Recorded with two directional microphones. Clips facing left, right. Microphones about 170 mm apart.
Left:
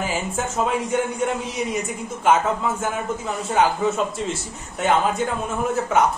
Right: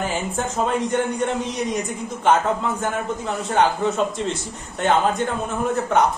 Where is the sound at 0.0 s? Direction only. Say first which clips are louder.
Right 1 dB; 5° left (ahead or behind).